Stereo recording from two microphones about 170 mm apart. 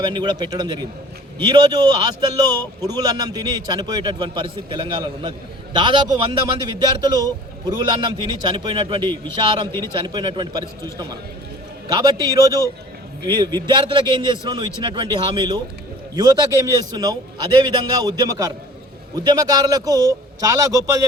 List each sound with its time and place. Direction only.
0.0 s speech: 25° right (ahead or behind)
11.9 s speech: 25° right (ahead or behind)